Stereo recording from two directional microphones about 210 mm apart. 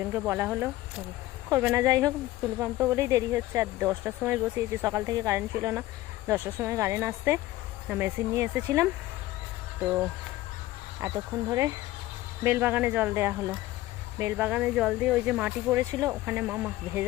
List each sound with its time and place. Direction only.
0.0 s speech: 10° right (ahead or behind)
11.0 s speech: 15° right (ahead or behind)
12.4 s speech: 10° right (ahead or behind)